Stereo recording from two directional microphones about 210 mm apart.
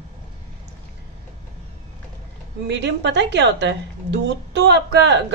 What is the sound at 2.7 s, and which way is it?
A woman's voice, 55° right (ahead or behind).